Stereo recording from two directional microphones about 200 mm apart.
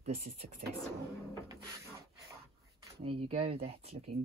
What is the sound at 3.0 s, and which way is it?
Speech, 30° right (ahead or behind).